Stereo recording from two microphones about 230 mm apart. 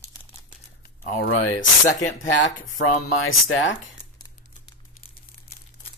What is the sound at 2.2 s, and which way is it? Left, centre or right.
Speech, left.